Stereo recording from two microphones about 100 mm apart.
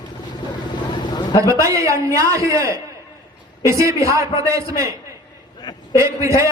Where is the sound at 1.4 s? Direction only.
30° right (ahead or behind).